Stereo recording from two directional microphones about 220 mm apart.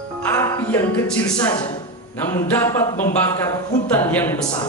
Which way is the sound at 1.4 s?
20° left (ahead or behind).